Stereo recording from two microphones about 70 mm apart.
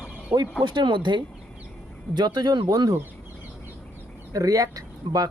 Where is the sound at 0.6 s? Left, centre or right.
Right.